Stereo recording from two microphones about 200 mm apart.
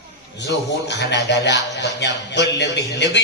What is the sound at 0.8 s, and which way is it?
Speech, 60° left (ahead or behind).